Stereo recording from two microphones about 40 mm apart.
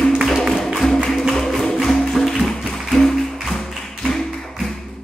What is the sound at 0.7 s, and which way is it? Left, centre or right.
Music, centre.